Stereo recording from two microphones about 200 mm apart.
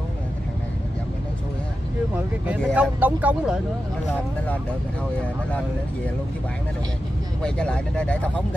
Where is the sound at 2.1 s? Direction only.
5° right (ahead or behind).